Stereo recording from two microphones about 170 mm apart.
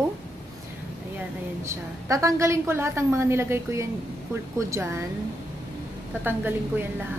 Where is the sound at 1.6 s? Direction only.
20° right (ahead or behind).